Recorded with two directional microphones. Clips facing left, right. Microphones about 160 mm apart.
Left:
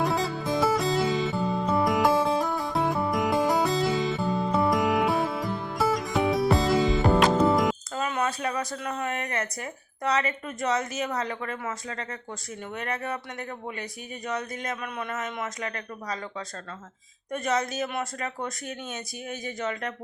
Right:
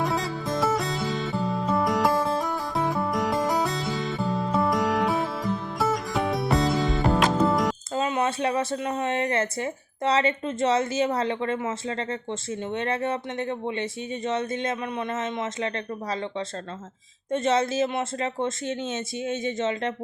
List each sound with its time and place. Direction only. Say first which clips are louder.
0.0 s music: left 1 dB; centre (ahead or behind)
7.9 s speech: right 3 dB; 25° right (ahead or behind)
17.3 s speech: right 5 dB; 25° right (ahead or behind)